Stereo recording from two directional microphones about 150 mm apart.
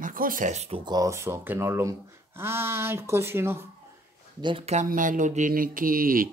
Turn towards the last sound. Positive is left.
turn(degrees=-70)  # may be behind; listen again after turning